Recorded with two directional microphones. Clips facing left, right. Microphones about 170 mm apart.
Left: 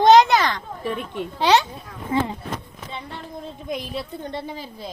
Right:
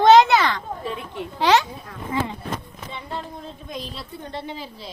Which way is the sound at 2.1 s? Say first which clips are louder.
Left 3 dB; 30° left (ahead or behind).